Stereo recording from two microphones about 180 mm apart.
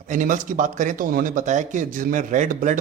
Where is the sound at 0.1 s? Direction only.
45° right (ahead or behind).